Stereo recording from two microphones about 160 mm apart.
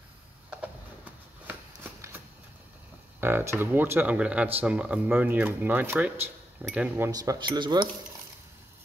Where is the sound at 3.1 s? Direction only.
15° right (ahead or behind).